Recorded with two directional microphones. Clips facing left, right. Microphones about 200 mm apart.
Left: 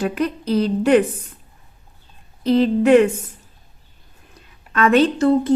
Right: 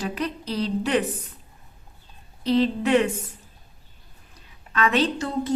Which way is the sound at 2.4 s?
50° left (ahead or behind).